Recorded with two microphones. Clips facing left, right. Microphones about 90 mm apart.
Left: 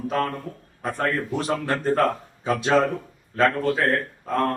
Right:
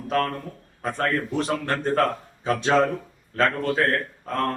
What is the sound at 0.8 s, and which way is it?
A man's voice, 5° left (ahead or behind).